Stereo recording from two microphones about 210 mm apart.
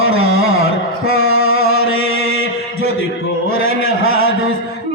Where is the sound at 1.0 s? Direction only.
75° left (ahead or behind).